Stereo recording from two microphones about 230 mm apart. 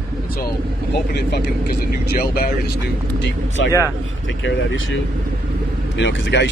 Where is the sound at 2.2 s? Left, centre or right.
Left.